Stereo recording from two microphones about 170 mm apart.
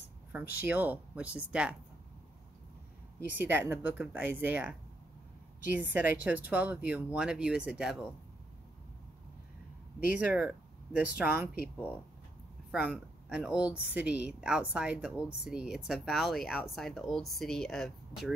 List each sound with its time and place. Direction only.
0.3 s speech: 10° right (ahead or behind)
3.3 s speech: 10° right (ahead or behind)
5.8 s speech: 10° right (ahead or behind)
10.1 s speech: 10° right (ahead or behind)
12.7 s speech: 10° right (ahead or behind)